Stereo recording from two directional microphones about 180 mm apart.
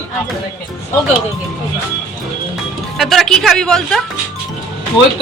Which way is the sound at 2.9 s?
Centre (ahead or behind).